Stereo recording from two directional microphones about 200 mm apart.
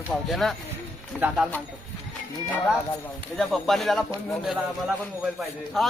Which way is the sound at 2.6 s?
Centre (ahead or behind).